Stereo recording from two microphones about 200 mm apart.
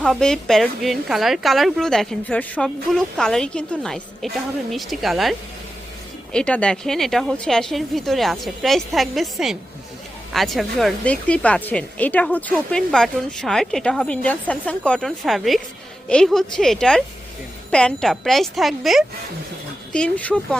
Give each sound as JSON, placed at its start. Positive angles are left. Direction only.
{"t": 0.0, "sound": "a woman's voice", "side_deg": 5}